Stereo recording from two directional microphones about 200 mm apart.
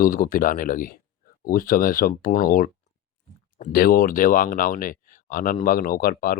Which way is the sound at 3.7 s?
45° left (ahead or behind).